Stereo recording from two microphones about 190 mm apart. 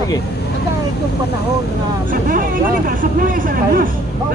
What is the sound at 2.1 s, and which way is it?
Speech, 45° right (ahead or behind).